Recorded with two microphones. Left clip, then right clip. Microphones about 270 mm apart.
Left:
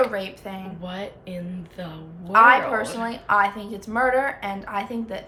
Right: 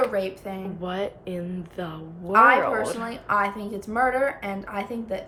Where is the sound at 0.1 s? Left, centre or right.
Centre.